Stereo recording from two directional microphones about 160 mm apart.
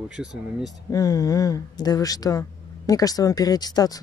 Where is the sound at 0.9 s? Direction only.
20° left (ahead or behind).